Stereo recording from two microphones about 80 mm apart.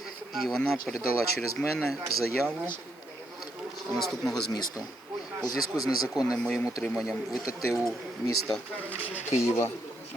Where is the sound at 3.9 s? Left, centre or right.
Centre.